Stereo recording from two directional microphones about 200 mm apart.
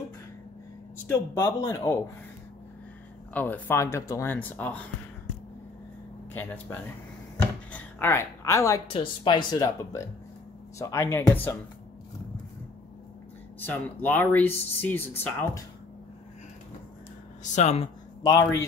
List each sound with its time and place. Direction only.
1.3 s speech: 15° left (ahead or behind)
3.3 s speech: 10° left (ahead or behind)
6.3 s a woman's voice: 10° left (ahead or behind)
8.8 s speech: 25° left (ahead or behind)
13.7 s speech: 10° left (ahead or behind)
17.4 s speech: 35° left (ahead or behind)
18.2 s speech: 15° left (ahead or behind)